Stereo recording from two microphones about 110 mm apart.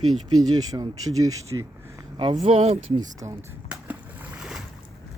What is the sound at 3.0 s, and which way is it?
Speech, 35° right (ahead or behind).